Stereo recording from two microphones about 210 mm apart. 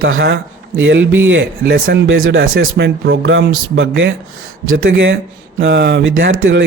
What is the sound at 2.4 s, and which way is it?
A man's voice, 45° right (ahead or behind).